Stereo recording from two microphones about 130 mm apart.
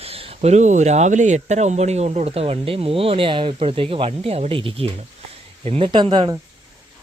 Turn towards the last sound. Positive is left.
turn(degrees=-40)  # may be behind; listen again after turning